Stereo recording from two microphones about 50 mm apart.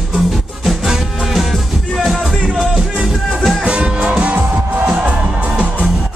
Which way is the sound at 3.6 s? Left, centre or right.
Centre.